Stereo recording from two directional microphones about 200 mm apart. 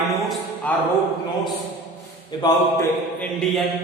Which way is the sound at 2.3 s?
20° left (ahead or behind).